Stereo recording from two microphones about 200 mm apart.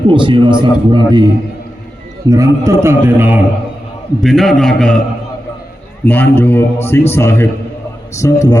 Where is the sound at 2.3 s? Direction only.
15° right (ahead or behind).